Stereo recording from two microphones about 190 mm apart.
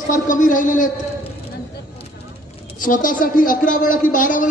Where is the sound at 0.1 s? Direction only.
45° left (ahead or behind).